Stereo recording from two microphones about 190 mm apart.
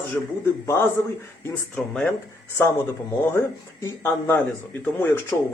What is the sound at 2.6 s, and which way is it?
Speech, 15° left (ahead or behind).